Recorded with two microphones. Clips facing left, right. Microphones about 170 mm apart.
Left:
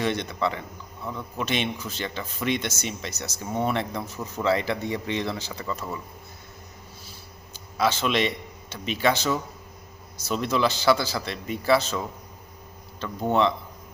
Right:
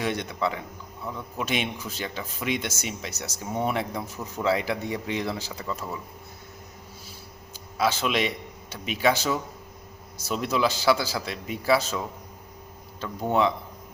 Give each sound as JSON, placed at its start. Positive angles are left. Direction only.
{"t": 0.0, "sound": "speech", "side_deg": -5}
{"t": 7.8, "sound": "speech", "side_deg": -5}